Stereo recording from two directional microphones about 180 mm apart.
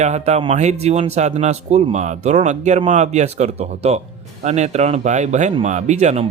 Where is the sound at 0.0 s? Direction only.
40° right (ahead or behind).